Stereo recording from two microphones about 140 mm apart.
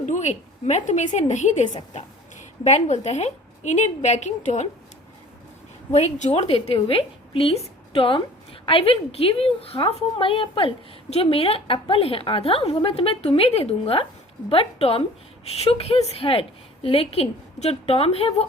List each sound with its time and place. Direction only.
0.0 s a woman's voice: 60° left (ahead or behind)
5.9 s a woman's voice: 55° left (ahead or behind)